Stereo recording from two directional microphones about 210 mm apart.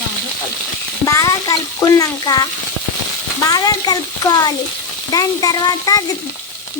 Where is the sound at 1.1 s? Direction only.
15° left (ahead or behind).